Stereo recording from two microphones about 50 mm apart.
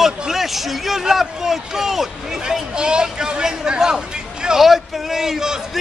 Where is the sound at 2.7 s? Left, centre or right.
Centre.